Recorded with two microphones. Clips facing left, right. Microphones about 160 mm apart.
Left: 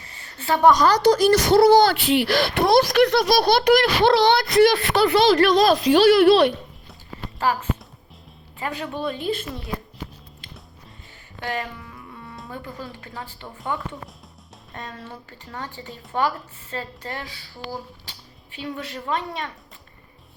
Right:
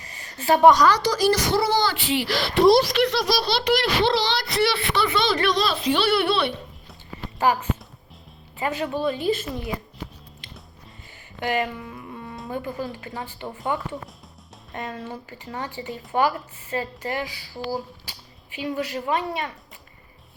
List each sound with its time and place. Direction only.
0.4 s a woman's voice: 15° right (ahead or behind)
1.0 s speech: 55° left (ahead or behind); by 6.2 s 40° left (ahead or behind)
8.5 s speech: 5° right (ahead or behind)
11.3 s music: 15° right (ahead or behind)
13.4 s a woman's voice: 15° right (ahead or behind)
14.8 s a woman's voice: 10° right (ahead or behind)
18.5 s a woman's voice: 10° right (ahead or behind)